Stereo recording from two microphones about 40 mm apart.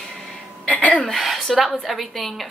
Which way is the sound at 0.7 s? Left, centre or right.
Left.